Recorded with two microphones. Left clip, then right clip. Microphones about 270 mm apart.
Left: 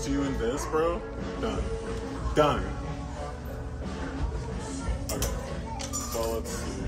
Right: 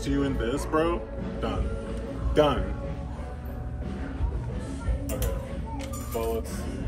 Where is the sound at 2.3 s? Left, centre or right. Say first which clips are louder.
Right 1 dB; centre.